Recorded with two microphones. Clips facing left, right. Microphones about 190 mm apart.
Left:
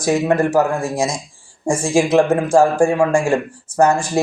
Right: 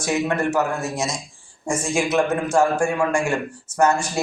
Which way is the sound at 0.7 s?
90° left.